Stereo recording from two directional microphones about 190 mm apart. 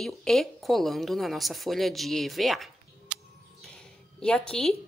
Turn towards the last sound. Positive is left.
turn(degrees=5)  # may be behind; listen again after turning